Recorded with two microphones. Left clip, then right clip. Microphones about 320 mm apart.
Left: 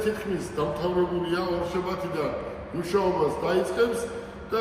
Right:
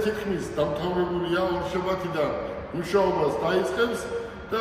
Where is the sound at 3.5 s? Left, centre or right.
Centre.